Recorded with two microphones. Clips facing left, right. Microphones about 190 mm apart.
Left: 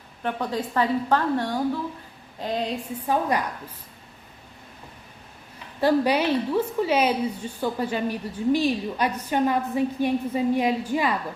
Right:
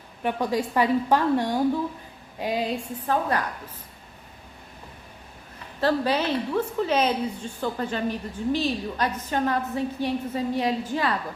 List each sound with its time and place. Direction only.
0.2 s a woman's voice: 10° right (ahead or behind)
3.1 s a woman's voice: 15° left (ahead or behind)
5.8 s a woman's voice: 10° left (ahead or behind)